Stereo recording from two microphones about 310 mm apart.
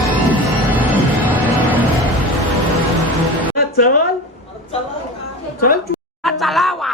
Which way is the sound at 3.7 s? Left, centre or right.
Left.